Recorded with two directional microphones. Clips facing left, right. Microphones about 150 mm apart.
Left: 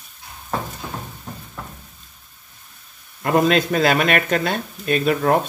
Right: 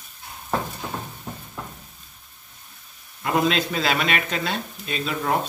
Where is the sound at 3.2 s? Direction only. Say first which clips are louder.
Left 5 dB; 50° left (ahead or behind).